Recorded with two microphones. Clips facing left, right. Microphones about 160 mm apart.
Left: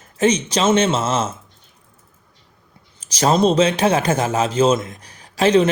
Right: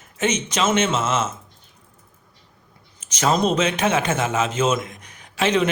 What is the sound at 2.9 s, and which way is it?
A man's voice, 35° left (ahead or behind).